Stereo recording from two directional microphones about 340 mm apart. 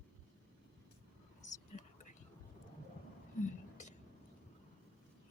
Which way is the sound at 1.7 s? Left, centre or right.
Left.